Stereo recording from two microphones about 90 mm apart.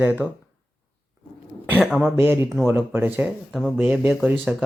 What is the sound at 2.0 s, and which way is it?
Speech, 25° right (ahead or behind).